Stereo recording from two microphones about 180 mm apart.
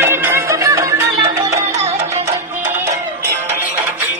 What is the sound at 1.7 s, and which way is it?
Music, 35° right (ahead or behind).